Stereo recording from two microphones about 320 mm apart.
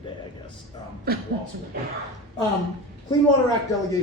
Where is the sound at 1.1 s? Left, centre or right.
Right.